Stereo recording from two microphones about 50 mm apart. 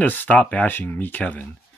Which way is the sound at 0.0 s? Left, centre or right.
Left.